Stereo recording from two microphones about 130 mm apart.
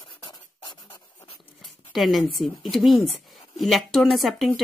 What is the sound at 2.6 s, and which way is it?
Speech, centre (ahead or behind).